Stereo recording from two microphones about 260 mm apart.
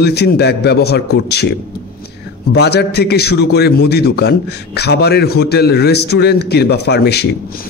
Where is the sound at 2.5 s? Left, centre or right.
Left.